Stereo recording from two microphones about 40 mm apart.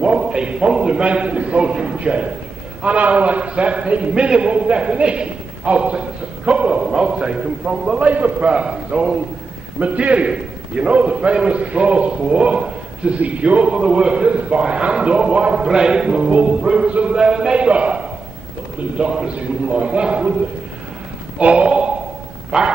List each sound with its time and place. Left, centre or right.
0.0 s a man's voice: right
6.8 s a man's voice: right
8.0 s a man's voice: right
8.5 s a man's voice: right
9.8 s a man's voice: right
13.2 s a man's voice: right
21.4 s a man's voice: right